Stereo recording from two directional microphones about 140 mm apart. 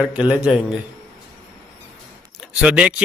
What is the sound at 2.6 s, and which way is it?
Speech, 5° right (ahead or behind).